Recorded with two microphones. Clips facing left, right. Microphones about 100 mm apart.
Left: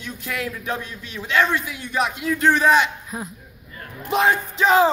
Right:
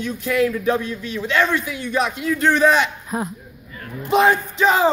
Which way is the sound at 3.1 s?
60° right (ahead or behind).